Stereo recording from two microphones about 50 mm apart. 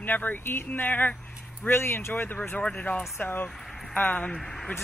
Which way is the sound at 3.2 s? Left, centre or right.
Left.